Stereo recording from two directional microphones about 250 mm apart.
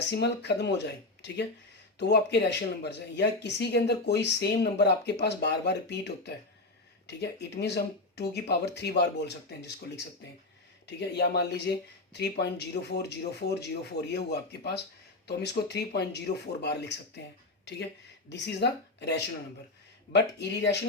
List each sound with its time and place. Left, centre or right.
0.1 s speech: left
2.0 s speech: left